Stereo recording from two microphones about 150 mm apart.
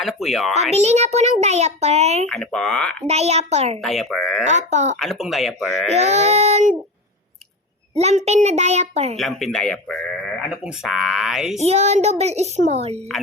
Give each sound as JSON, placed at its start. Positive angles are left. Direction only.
{"t": 0.0, "sound": "speech", "side_deg": 0}
{"t": 0.7, "sound": "a child's voice", "side_deg": -50}
{"t": 2.2, "sound": "speech", "side_deg": 5}
{"t": 3.1, "sound": "a child's voice", "side_deg": -45}
{"t": 3.8, "sound": "speech", "side_deg": 0}
{"t": 4.4, "sound": "a child's voice", "side_deg": -50}
{"t": 4.9, "sound": "speech", "side_deg": 0}
{"t": 5.9, "sound": "a child's voice", "side_deg": -45}
{"t": 7.9, "sound": "a child's voice", "side_deg": -45}
{"t": 9.1, "sound": "speech", "side_deg": 0}
{"t": 11.6, "sound": "a child's voice", "side_deg": -45}